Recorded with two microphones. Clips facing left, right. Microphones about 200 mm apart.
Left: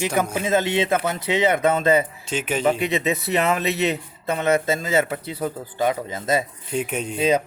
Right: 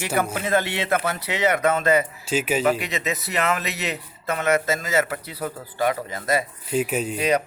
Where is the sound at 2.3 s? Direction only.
5° right (ahead or behind).